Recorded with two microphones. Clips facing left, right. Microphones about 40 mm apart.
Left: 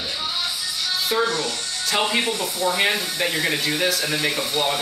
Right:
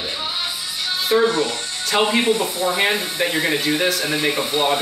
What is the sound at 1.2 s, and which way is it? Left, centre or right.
A man's voice, right.